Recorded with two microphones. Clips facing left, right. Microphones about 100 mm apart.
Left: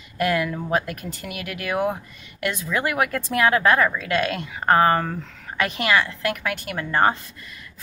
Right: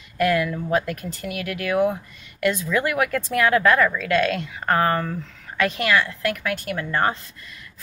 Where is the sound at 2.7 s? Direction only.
20° left (ahead or behind).